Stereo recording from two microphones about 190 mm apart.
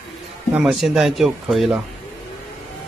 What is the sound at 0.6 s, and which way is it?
Speech, 5° right (ahead or behind).